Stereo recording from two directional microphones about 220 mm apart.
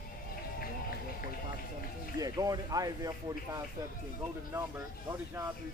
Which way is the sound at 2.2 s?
15° right (ahead or behind).